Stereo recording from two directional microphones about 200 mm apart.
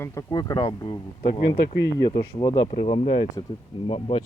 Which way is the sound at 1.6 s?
60° left (ahead or behind).